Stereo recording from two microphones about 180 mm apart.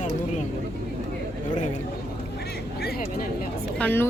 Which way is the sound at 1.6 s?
40° left (ahead or behind).